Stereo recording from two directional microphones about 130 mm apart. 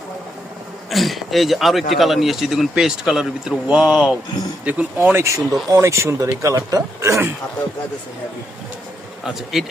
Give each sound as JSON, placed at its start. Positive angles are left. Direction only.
{"t": 0.9, "sound": "speech", "side_deg": 0}
{"t": 9.2, "sound": "speech", "side_deg": 0}